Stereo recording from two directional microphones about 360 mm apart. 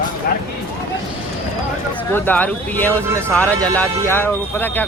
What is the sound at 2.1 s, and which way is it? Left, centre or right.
Speech, centre.